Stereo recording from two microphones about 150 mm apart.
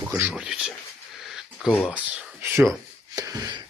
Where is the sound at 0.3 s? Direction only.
5° right (ahead or behind).